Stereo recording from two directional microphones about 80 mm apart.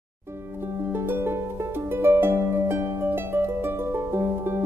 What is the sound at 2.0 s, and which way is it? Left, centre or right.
Harp, right.